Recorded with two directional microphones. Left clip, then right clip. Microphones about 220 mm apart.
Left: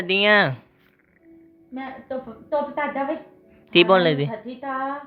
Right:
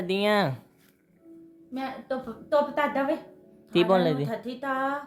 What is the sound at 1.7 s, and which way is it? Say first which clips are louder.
A woman's voice: left 1 dB; 30° right (ahead or behind).